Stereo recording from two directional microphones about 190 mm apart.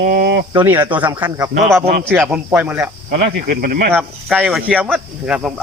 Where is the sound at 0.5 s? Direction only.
10° right (ahead or behind).